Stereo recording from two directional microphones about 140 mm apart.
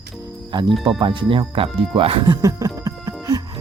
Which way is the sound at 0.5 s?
35° right (ahead or behind).